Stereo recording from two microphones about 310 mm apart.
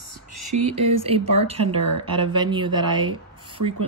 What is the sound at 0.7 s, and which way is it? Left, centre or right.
Speech, centre.